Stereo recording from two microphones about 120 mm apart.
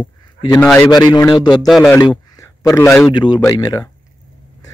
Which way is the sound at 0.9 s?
30° left (ahead or behind).